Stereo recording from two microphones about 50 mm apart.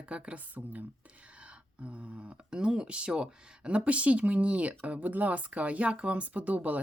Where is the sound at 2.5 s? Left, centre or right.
Centre.